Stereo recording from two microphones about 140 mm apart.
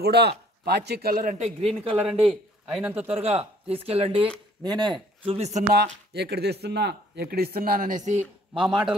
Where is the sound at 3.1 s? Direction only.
50° right (ahead or behind).